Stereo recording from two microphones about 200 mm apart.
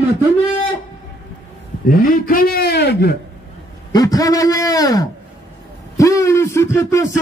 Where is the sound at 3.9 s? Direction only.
20° left (ahead or behind).